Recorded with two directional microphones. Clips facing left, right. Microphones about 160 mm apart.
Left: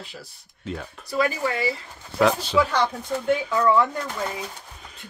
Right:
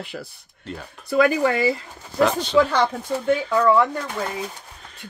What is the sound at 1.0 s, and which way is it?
Speech, 60° right (ahead or behind).